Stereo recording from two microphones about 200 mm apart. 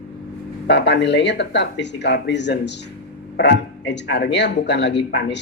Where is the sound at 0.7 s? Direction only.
60° left (ahead or behind).